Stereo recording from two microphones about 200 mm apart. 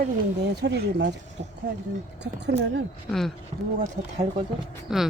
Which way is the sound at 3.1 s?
Centre (ahead or behind).